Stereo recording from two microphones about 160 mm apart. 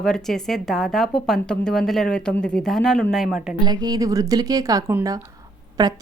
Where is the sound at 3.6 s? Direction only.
25° right (ahead or behind).